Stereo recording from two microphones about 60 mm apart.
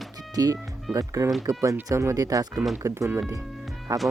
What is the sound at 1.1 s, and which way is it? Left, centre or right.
Speech, right.